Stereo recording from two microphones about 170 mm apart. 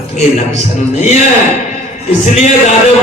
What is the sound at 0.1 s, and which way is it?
A man's voice, 45° left (ahead or behind).